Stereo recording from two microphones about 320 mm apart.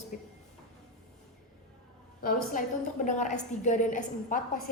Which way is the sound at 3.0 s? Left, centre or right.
Left.